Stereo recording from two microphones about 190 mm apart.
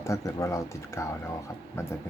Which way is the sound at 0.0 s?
15° left (ahead or behind).